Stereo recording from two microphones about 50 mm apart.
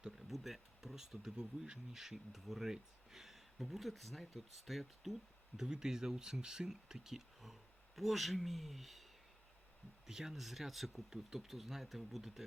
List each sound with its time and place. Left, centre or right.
0.0 s speech: centre
5.5 s speech: centre
10.1 s speech: centre